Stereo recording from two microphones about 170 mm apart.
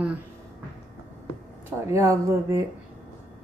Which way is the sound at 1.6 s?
15° right (ahead or behind).